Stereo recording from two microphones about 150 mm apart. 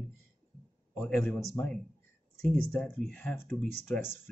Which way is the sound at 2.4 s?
5° left (ahead or behind).